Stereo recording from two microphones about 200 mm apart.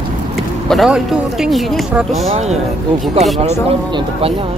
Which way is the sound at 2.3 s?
30° right (ahead or behind).